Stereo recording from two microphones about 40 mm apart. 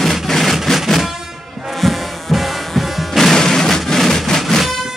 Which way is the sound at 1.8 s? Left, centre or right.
Centre.